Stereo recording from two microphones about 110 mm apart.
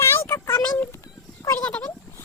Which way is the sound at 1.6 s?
10° left (ahead or behind).